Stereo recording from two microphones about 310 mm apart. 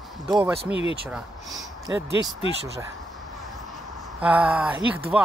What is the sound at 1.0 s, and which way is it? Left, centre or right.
Speech, centre.